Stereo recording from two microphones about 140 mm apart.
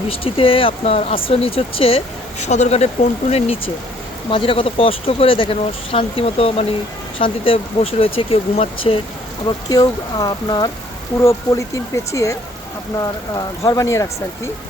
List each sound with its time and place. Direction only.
0.1 s speech: 40° left (ahead or behind)
2.4 s speech: 55° left (ahead or behind)
4.3 s speech: 40° left (ahead or behind)
9.6 s speech: 25° left (ahead or behind)